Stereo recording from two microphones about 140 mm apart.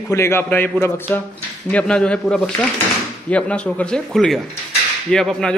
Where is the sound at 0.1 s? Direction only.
20° left (ahead or behind).